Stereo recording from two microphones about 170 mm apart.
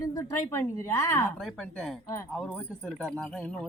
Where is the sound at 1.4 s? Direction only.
5° left (ahead or behind).